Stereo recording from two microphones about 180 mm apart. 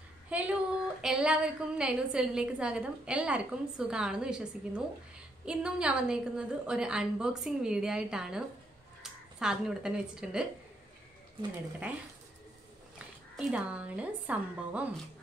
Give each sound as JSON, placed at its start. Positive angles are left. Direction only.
{"t": 0.3, "sound": "a woman's voice", "side_deg": -5}
{"t": 13.4, "sound": "speech", "side_deg": -5}